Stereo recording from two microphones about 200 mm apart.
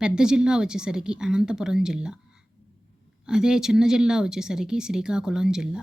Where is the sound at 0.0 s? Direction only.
5° right (ahead or behind).